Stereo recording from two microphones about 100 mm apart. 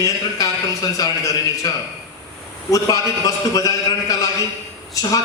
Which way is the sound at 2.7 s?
35° left (ahead or behind).